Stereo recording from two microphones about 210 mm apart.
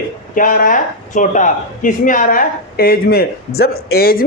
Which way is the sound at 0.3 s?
40° left (ahead or behind).